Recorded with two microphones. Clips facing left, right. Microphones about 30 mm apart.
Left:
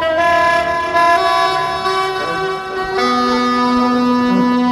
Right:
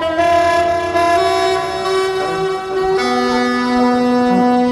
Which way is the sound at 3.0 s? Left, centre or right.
Centre.